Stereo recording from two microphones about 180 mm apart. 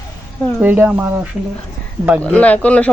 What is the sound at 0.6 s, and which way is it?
Speech, 10° right (ahead or behind).